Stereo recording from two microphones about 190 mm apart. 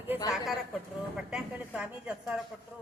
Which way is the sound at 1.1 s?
5° right (ahead or behind).